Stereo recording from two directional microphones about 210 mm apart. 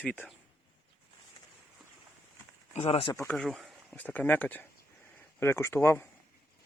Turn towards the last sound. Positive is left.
turn(degrees=10)  # may be behind; listen again after turning